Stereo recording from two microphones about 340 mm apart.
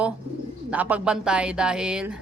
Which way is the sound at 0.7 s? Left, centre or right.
Centre.